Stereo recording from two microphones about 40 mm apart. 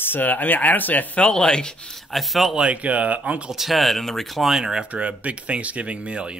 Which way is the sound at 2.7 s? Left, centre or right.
Right.